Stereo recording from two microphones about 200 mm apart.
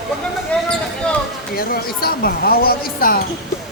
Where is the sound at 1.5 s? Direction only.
45° left (ahead or behind).